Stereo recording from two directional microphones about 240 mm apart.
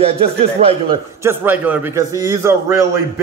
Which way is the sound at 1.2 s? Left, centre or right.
Centre.